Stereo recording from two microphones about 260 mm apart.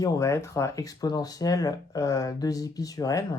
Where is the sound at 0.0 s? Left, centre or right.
Centre.